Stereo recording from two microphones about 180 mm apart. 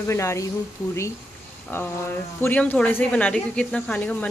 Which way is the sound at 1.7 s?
15° left (ahead or behind).